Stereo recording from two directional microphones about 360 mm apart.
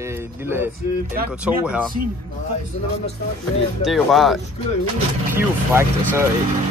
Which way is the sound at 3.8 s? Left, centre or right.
Centre.